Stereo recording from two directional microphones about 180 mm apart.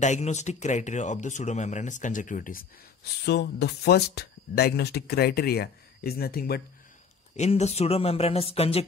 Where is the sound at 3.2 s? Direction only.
65° left (ahead or behind).